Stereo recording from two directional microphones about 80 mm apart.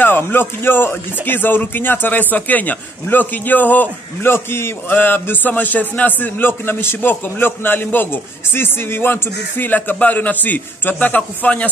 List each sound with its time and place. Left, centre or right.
0.0 s speech: left